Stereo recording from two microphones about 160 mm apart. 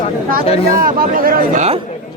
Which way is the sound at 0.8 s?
65° right (ahead or behind).